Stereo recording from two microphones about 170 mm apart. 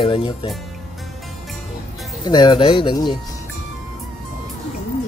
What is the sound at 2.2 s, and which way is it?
Speech, 25° left (ahead or behind).